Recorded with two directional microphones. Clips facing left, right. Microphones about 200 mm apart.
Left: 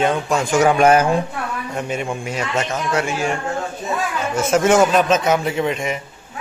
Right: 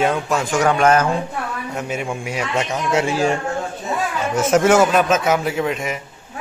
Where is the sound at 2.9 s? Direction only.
35° right (ahead or behind).